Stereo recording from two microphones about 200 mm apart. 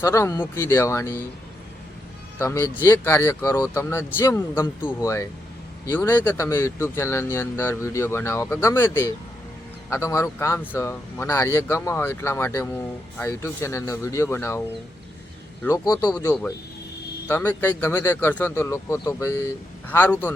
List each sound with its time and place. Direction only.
0.0 s speech: 15° left (ahead or behind)
2.4 s speech: 10° left (ahead or behind)
15.6 s speech: 15° left (ahead or behind)